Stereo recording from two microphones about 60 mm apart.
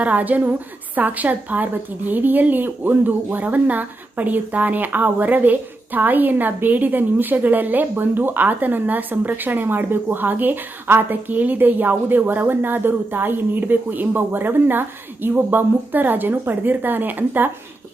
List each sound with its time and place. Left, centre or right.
0.0 s a woman's voice: right